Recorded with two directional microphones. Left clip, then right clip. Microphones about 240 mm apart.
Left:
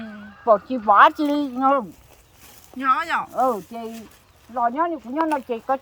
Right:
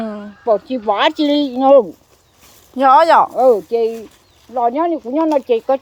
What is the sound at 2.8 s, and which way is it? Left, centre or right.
Speech, centre.